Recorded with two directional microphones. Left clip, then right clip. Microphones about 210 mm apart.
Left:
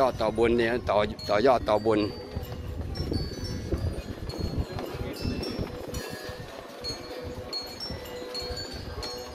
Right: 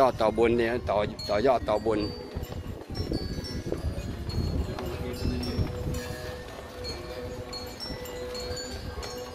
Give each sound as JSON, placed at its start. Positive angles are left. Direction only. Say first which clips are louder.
{"t": 0.0, "sound": "speech", "louder": "right 2 dB", "side_deg": -20}
{"t": 0.4, "sound": "speech", "louder": "even", "side_deg": 0}
{"t": 0.9, "sound": "speech", "louder": "left 2 dB", "side_deg": 20}